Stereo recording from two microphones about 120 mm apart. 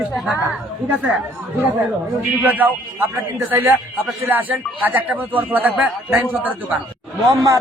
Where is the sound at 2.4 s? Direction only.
15° right (ahead or behind).